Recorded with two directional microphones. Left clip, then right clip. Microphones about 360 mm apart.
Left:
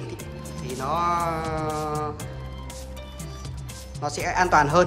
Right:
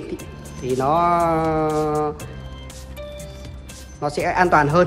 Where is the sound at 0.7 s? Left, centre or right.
Centre.